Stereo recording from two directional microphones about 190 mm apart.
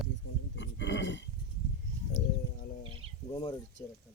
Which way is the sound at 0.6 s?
70° left (ahead or behind).